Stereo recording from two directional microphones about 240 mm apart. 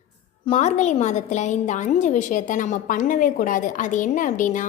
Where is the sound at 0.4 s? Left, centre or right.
Left.